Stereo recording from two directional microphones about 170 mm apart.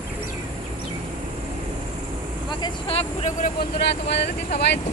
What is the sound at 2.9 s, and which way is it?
Speech, 35° left (ahead or behind).